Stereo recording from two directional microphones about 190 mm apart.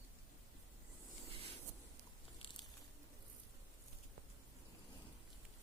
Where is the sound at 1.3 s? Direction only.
30° right (ahead or behind).